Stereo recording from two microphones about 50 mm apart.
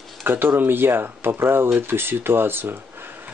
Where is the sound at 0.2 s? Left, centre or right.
Right.